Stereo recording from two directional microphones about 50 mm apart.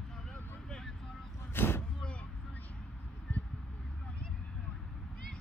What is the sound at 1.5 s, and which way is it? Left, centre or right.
Vehicle, left.